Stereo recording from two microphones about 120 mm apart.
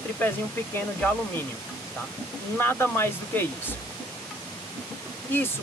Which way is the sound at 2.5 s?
20° left (ahead or behind).